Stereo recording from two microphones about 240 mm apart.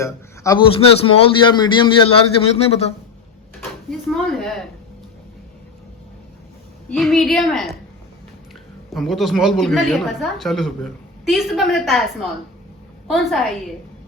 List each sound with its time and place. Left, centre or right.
0.0 s a man's voice: centre
0.8 s a man's voice: left
3.6 s a sound: centre
6.9 s a woman's voice: centre
8.9 s a woman's voice: centre